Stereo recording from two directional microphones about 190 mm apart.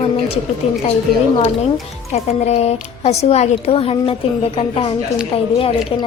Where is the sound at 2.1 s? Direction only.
35° left (ahead or behind).